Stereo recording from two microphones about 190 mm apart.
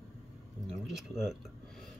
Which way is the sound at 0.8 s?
Centre (ahead or behind).